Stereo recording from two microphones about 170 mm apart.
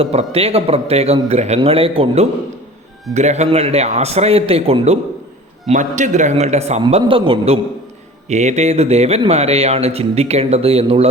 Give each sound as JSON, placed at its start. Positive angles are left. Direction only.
{"t": 0.0, "sound": "speech", "side_deg": -35}